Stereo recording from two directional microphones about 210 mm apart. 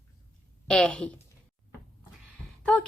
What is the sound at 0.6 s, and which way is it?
Speech, 5° left (ahead or behind).